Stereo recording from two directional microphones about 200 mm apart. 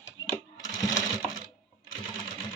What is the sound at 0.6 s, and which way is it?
Sewing machine, 20° left (ahead or behind).